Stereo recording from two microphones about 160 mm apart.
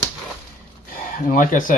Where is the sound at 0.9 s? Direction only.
55° left (ahead or behind).